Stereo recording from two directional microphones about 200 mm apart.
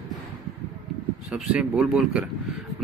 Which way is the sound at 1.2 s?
Centre (ahead or behind).